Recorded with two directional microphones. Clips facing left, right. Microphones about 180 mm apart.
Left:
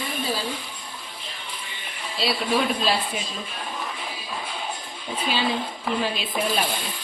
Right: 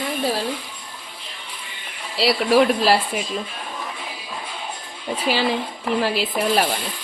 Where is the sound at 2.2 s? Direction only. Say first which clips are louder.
Right 7 dB; 75° right (ahead or behind).